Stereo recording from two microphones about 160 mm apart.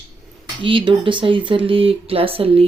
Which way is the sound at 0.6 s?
30° right (ahead or behind).